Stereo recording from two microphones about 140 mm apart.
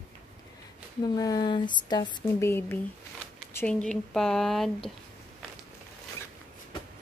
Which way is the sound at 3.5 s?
5° left (ahead or behind).